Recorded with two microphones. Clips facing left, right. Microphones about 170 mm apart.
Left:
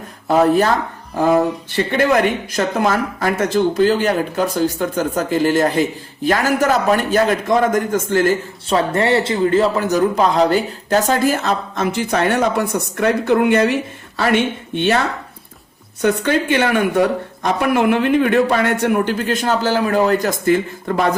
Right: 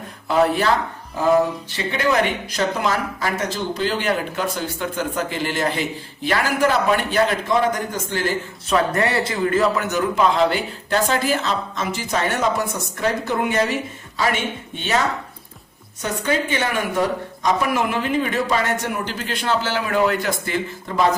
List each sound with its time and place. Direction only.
0.3 s speech: 45° left (ahead or behind)
1.7 s speech: 55° left (ahead or behind)
8.6 s a man's voice: 30° left (ahead or behind); by 13.7 s 65° left (ahead or behind)
16.0 s a woman's voice: 65° left (ahead or behind)